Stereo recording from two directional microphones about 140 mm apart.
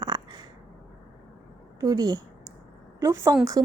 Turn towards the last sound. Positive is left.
turn(degrees=-20)  # may be behind; listen again after turning